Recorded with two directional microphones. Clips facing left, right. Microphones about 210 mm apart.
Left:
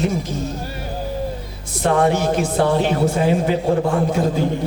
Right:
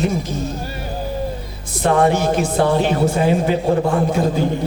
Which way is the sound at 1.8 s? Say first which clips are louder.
Right 1 dB; 20° right (ahead or behind).